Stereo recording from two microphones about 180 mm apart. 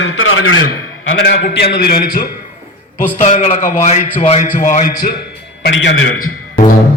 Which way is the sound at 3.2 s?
40° left (ahead or behind).